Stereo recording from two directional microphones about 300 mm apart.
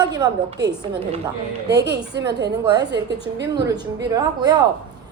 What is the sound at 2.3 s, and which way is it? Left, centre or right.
Speech, right.